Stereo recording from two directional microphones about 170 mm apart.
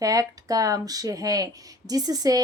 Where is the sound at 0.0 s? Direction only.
20° right (ahead or behind).